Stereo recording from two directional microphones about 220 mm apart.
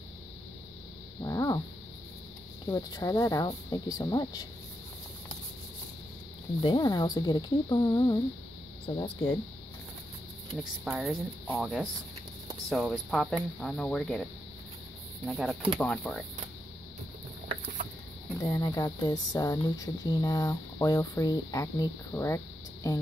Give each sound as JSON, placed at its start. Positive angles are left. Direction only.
{"t": 1.2, "sound": "dog", "side_deg": 15}
{"t": 2.6, "sound": "speech", "side_deg": 15}
{"t": 6.6, "sound": "speech", "side_deg": 20}
{"t": 10.6, "sound": "speech", "side_deg": 0}
{"t": 15.2, "sound": "speech", "side_deg": 0}
{"t": 18.4, "sound": "speech", "side_deg": 15}